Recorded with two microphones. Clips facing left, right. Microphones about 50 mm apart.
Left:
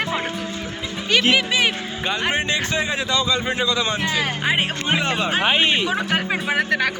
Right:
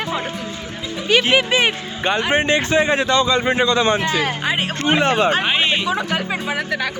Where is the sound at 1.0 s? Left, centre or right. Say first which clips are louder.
Right 2 dB; centre.